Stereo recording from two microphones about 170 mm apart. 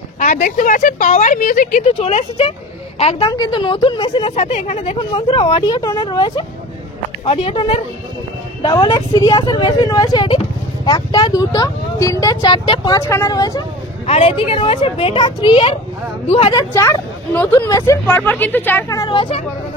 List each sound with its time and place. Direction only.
0.2 s speech: 50° left (ahead or behind)
2.0 s speech: 35° left (ahead or behind)
3.3 s speech: 25° left (ahead or behind)
4.4 s speech: 40° left (ahead or behind)
4.9 s speech: 30° left (ahead or behind)
14.0 s speech: 35° left (ahead or behind)
16.7 s speech: 15° left (ahead or behind); by 19.4 s 30° left (ahead or behind)